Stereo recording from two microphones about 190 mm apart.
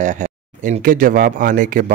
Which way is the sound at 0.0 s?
40° right (ahead or behind).